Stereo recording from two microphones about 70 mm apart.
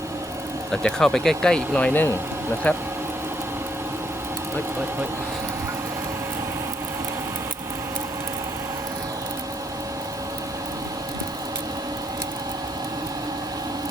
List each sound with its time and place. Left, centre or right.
0.7 s speech: centre